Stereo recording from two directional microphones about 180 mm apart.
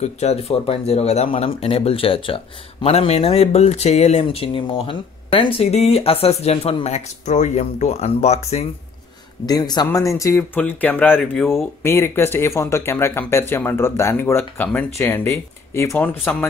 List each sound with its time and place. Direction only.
0.0 s speech: 35° left (ahead or behind)
9.5 s a man's voice: 25° left (ahead or behind); by 16.4 s 5° left (ahead or behind)